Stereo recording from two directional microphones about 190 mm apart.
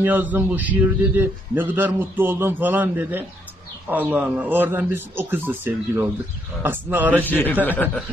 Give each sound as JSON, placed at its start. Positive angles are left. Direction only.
{"t": 0.0, "sound": "a man's voice", "side_deg": -10}
{"t": 7.2, "sound": "speech", "side_deg": 10}